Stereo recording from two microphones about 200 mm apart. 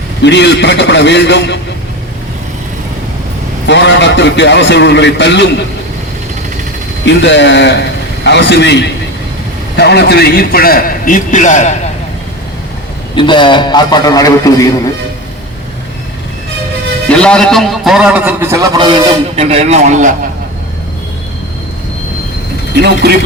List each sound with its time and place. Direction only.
0.2 s a man's voice: 60° left (ahead or behind)
3.7 s a man's voice: 60° left (ahead or behind)
7.0 s a man's voice: 65° left (ahead or behind); by 11.8 s 35° left (ahead or behind)
13.1 s a man's voice: 25° left (ahead or behind)
17.1 s a man's voice: 5° left (ahead or behind); by 20.1 s 35° right (ahead or behind)
23.0 s chopping: 55° right (ahead or behind)